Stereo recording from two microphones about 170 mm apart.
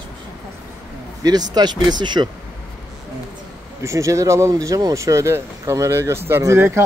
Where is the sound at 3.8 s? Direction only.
15° right (ahead or behind).